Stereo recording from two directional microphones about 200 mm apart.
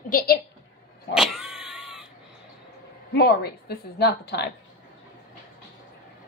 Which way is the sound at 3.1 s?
50° left (ahead or behind).